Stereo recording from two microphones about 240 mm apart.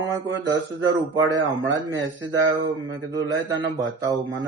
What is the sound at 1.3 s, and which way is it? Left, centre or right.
Speech, centre.